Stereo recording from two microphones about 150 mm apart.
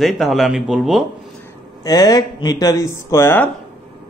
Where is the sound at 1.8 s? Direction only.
25° left (ahead or behind).